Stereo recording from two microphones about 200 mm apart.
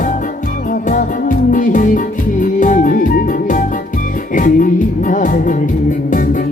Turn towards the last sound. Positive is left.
turn(degrees=40)  # may be behind; listen again after turning